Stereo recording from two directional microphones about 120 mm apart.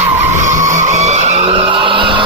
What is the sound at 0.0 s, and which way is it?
Vehicle, 80° right.